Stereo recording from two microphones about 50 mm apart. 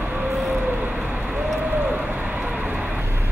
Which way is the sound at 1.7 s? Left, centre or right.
Right.